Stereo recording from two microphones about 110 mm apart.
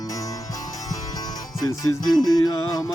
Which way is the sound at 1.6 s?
35° left (ahead or behind).